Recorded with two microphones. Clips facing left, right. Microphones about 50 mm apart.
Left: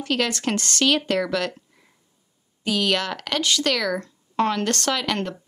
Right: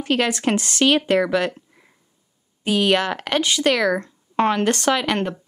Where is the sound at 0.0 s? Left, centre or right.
Centre.